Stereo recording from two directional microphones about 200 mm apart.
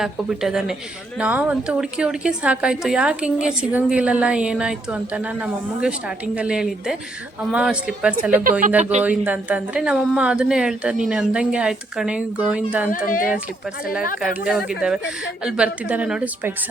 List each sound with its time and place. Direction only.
0.0 s a woman's voice: centre (ahead or behind)
12.9 s speech: 45° left (ahead or behind)
14.2 s a woman's voice: 5° right (ahead or behind)